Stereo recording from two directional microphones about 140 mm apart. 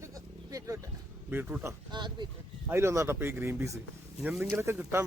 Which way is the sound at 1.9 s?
35° right (ahead or behind).